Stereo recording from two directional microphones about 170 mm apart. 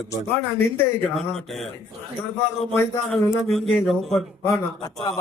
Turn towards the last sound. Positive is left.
turn(degrees=20)  # may be behind; listen again after turning